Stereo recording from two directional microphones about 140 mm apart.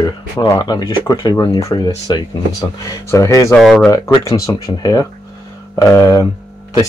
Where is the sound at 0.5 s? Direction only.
30° left (ahead or behind).